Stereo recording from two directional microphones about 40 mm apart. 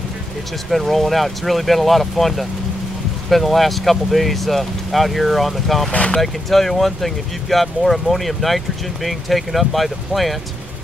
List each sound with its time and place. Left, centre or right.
0.7 s speech: centre
5.9 s speech: left
6.2 s speech: centre